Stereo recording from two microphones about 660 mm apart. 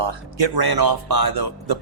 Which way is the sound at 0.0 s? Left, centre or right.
Right.